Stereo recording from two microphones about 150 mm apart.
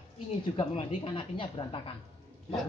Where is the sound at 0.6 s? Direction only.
35° left (ahead or behind).